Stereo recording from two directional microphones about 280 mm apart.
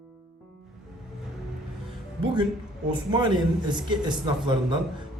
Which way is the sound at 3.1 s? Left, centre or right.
Centre.